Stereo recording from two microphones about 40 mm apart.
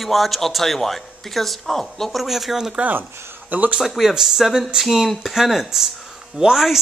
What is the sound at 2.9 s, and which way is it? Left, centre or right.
Speech, right.